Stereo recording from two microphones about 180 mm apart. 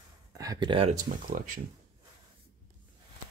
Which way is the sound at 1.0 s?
50° right (ahead or behind).